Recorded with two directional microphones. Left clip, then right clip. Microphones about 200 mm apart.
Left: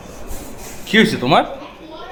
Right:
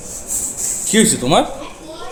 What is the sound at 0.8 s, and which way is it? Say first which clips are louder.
Speech: left 1 dB; 25° right (ahead or behind).